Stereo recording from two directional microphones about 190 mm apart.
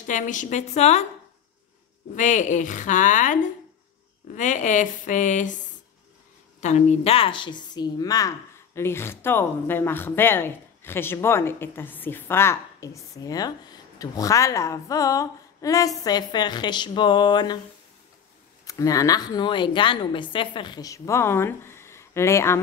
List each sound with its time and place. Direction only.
0.0 s a woman's voice: 40° left (ahead or behind)
2.1 s a woman's voice: 40° left (ahead or behind)
4.4 s a woman's voice: 40° left (ahead or behind)
6.6 s speech: 35° left (ahead or behind)
18.7 s speech: 20° left (ahead or behind)